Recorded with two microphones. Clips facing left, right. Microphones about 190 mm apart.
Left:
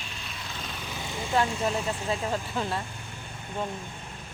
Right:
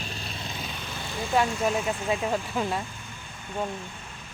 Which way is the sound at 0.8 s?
10° left (ahead or behind).